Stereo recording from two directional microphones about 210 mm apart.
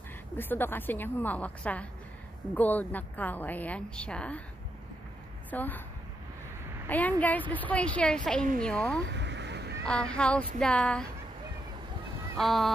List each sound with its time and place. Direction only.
0.4 s a woman's voice: 10° left (ahead or behind)
5.5 s a woman's voice: 10° left (ahead or behind)
6.9 s a woman's voice: 5° left (ahead or behind)
9.0 s a sound: 55° right (ahead or behind)
9.8 s speech: 5° left (ahead or behind)
12.4 s speech: centre (ahead or behind)